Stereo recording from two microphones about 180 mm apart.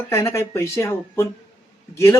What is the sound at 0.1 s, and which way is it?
Speech, 15° left (ahead or behind).